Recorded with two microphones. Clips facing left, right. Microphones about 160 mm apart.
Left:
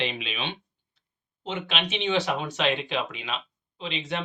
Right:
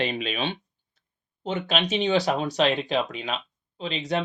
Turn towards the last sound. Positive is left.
turn(degrees=-40)  # may be behind; listen again after turning